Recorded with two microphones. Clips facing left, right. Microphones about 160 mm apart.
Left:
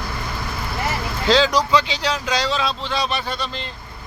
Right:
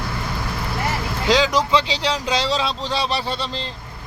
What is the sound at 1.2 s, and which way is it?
Speech, 15° right (ahead or behind).